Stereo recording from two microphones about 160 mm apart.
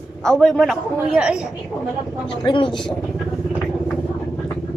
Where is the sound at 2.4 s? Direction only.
30° left (ahead or behind).